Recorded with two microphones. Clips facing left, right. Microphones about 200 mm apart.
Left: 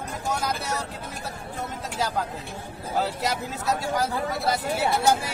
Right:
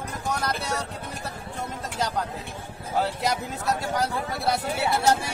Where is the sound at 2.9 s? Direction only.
Centre (ahead or behind).